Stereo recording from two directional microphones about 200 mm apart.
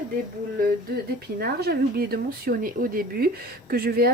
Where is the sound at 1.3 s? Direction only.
50° right (ahead or behind).